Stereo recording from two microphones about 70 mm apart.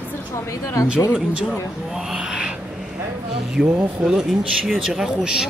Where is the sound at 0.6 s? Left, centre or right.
Left.